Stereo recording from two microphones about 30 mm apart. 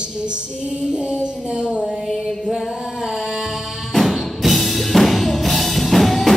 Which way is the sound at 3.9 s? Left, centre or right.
Centre.